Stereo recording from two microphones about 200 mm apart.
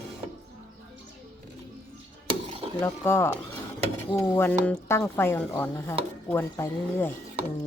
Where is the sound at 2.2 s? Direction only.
25° right (ahead or behind).